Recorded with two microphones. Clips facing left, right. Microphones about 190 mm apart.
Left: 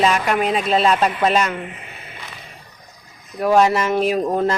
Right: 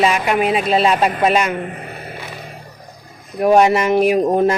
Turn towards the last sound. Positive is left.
turn(degrees=-15)  # may be behind; listen again after turning